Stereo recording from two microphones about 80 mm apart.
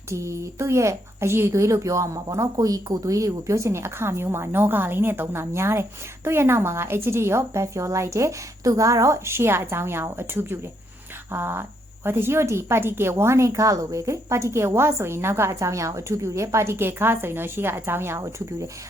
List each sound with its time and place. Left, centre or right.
0.1 s a woman's voice: right
18.2 s speech: right